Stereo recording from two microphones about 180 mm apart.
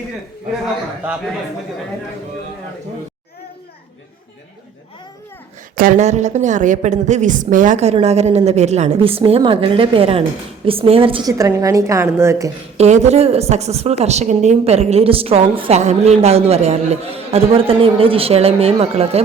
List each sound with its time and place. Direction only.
5.7 s a woman's voice: 50° right (ahead or behind); by 11.2 s 30° right (ahead or behind)
11.3 s a woman's voice: 15° right (ahead or behind)
12.7 s a woman's voice: 40° right (ahead or behind)